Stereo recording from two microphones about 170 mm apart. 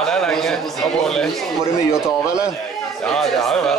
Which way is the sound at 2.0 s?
5° right (ahead or behind).